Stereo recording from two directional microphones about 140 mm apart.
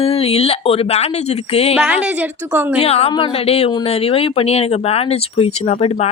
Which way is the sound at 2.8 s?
45° left (ahead or behind).